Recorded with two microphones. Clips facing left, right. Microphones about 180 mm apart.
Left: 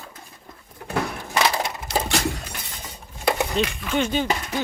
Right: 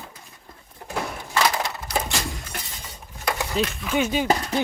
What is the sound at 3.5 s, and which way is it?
Speech, centre (ahead or behind).